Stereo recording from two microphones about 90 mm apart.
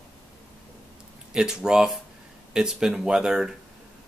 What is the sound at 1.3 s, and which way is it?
Speech, 5° right (ahead or behind).